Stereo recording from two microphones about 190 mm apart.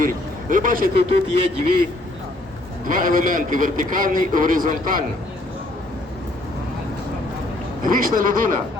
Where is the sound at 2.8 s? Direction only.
45° right (ahead or behind).